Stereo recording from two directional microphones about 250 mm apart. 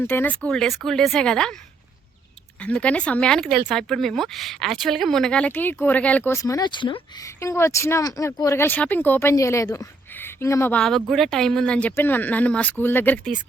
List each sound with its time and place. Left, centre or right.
0.0 s speech: centre
2.6 s speech: centre